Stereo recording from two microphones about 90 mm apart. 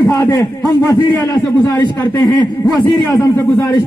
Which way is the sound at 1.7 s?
20° left (ahead or behind).